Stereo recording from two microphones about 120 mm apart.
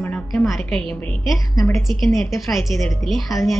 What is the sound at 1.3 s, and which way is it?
Speech, 25° left (ahead or behind).